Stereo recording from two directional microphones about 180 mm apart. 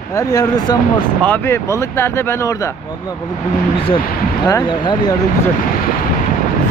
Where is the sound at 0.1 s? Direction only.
20° left (ahead or behind).